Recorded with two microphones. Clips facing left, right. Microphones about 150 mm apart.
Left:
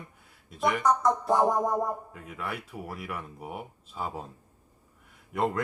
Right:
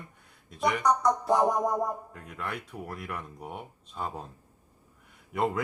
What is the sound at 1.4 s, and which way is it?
Music, 25° left (ahead or behind).